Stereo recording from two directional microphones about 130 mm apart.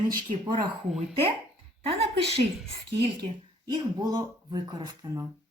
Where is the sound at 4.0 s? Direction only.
30° right (ahead or behind).